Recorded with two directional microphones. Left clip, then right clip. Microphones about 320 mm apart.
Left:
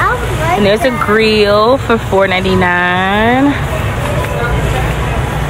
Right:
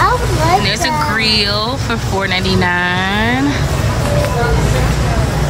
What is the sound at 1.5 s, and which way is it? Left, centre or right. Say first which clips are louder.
Speech: left 8 dB; centre.